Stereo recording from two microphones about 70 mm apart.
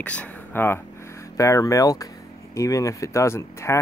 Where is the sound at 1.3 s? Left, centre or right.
Left.